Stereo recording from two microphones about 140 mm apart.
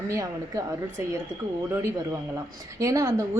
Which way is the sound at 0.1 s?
25° right (ahead or behind).